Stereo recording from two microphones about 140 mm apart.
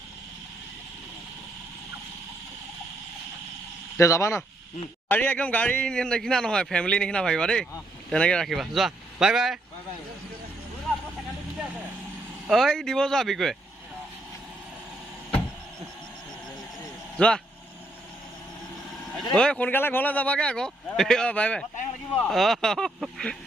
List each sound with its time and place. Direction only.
3.9 s speech: 20° left (ahead or behind)
5.0 s speech: 10° left (ahead or behind)
12.5 s speech: centre (ahead or behind)
17.2 s speech: 5° left (ahead or behind)
19.3 s speech: 5° left (ahead or behind)